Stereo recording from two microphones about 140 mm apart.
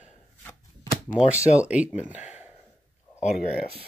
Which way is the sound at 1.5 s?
10° right (ahead or behind).